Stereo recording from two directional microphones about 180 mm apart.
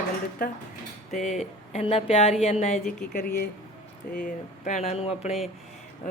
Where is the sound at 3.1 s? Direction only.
50° left (ahead or behind).